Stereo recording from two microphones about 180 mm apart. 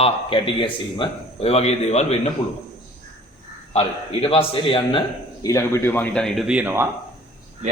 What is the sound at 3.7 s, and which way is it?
A man's voice, 30° left (ahead or behind).